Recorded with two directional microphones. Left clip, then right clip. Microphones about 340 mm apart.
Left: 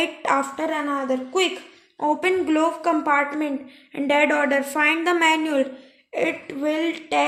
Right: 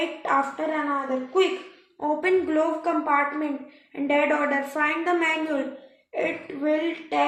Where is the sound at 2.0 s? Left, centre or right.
Left.